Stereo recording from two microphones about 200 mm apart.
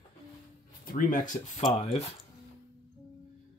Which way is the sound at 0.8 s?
45° left (ahead or behind).